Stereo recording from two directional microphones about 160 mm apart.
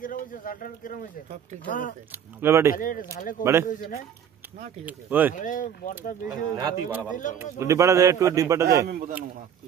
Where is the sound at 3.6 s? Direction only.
65° left (ahead or behind).